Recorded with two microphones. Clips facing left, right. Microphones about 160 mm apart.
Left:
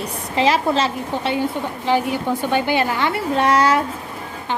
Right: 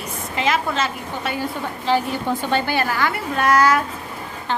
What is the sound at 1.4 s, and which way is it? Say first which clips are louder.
A woman's voice: left 4 dB; 15° left (ahead or behind).